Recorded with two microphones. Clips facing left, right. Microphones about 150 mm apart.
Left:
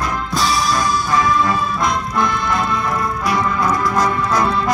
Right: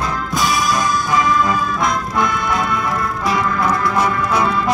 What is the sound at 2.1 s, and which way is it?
Music, 15° right (ahead or behind).